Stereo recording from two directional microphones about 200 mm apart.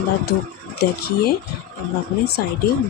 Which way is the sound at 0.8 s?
50° left (ahead or behind).